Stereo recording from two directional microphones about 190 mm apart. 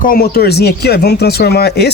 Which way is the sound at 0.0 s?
50° left (ahead or behind).